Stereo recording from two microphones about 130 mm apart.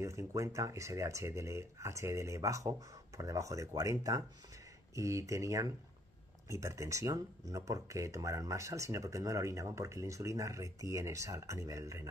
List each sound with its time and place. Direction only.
0.0 s speech: 20° right (ahead or behind)